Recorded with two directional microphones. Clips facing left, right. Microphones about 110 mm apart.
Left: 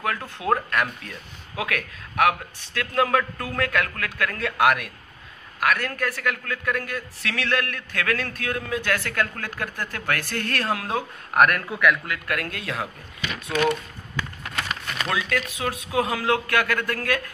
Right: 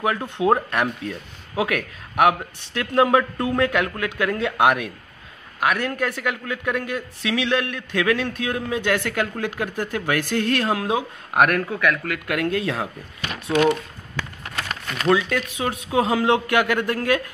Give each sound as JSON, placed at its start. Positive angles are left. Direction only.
{"t": 0.0, "sound": "a man's voice", "side_deg": -25}
{"t": 11.7, "sound": "speech", "side_deg": 5}
{"t": 12.3, "sound": "a man's voice", "side_deg": -25}
{"t": 15.0, "sound": "a man's voice", "side_deg": -30}